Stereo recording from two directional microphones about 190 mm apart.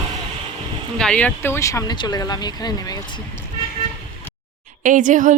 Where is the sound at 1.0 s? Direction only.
5° left (ahead or behind).